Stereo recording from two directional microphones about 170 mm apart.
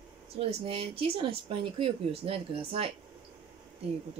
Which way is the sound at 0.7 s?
35° right (ahead or behind).